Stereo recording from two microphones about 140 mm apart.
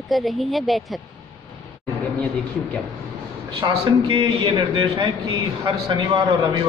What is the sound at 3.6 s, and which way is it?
A man's voice, 35° right (ahead or behind).